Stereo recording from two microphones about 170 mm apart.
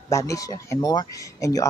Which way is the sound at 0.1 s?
15° left (ahead or behind).